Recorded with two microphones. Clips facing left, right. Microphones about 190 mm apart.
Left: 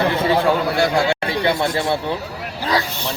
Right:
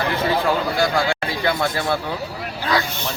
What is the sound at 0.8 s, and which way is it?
A man's voice, 25° left (ahead or behind).